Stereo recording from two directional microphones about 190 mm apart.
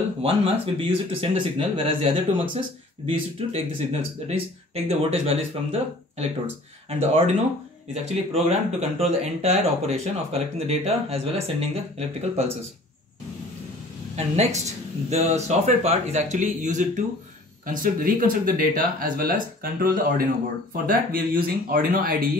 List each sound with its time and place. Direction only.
0.2 s speech: 30° right (ahead or behind)
14.1 s speech: 35° right (ahead or behind)